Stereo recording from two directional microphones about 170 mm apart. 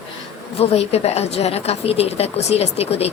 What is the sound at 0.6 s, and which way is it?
A woman's voice, 35° left (ahead or behind).